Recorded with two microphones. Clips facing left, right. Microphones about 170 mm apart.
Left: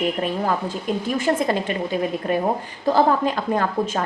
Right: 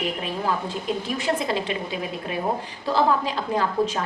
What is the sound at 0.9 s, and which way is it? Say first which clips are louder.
A woman's voice: left 4 dB; 50° left (ahead or behind).